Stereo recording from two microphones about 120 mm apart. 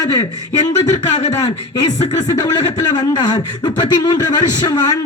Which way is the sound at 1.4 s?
35° left (ahead or behind).